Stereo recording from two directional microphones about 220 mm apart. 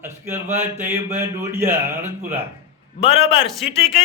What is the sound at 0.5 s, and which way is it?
A man's voice, 10° right (ahead or behind).